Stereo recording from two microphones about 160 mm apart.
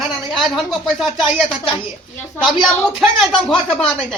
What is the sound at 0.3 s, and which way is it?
Speech, centre (ahead or behind).